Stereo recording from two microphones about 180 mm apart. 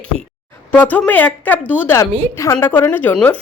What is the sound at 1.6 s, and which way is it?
Speech, 5° right (ahead or behind).